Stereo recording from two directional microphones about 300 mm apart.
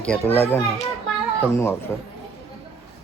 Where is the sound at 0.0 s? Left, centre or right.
Centre.